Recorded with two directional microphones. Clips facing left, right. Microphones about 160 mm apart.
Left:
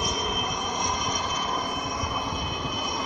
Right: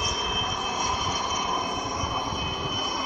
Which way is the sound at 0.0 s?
Centre (ahead or behind).